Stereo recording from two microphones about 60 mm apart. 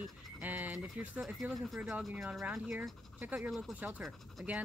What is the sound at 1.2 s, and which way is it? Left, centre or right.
Speech, centre.